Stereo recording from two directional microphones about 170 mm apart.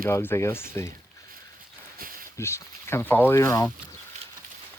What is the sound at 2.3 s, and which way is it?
Speech, 15° left (ahead or behind).